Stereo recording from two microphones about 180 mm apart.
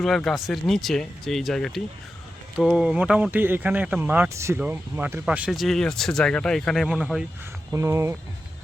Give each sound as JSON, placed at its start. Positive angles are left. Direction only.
{"t": 0.0, "sound": "speech", "side_deg": 0}
{"t": 7.7, "sound": "speech", "side_deg": -15}